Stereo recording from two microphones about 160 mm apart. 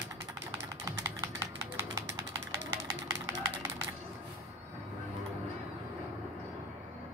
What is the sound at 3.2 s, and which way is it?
Run, 15° right (ahead or behind).